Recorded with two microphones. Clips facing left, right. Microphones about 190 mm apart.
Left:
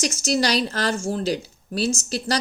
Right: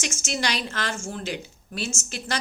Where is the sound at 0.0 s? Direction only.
35° left (ahead or behind).